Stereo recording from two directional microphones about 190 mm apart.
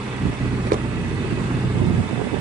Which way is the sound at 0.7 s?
50° right (ahead or behind).